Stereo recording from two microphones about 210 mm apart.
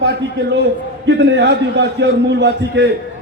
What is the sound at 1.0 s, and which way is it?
A man's voice, 55° right (ahead or behind).